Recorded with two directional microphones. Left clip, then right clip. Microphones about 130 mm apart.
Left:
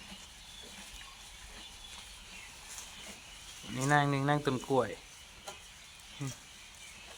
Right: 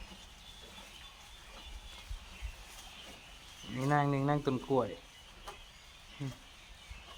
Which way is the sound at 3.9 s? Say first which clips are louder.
Left 2 dB; 5° right (ahead or behind).